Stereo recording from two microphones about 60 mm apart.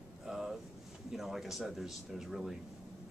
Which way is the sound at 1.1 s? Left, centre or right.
Centre.